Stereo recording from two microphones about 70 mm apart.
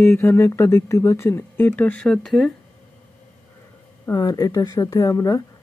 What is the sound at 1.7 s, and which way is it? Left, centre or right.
Speech, left.